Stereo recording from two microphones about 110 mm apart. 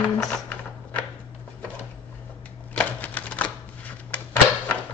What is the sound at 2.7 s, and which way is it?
Typewriter, 15° left (ahead or behind).